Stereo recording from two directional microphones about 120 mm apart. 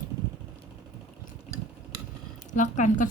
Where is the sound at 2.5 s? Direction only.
90° left.